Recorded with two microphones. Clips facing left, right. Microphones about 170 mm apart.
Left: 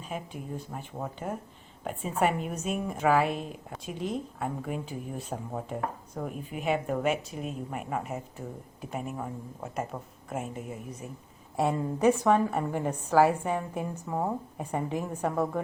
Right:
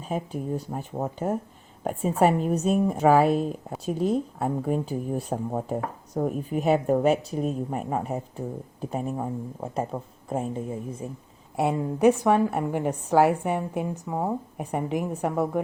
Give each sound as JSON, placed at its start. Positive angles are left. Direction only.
{"t": 0.0, "sound": "a woman's voice", "side_deg": -40}
{"t": 11.5, "sound": "a woman's voice", "side_deg": -15}